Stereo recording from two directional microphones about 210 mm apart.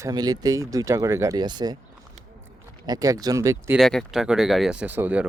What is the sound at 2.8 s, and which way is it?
Speech, 15° right (ahead or behind).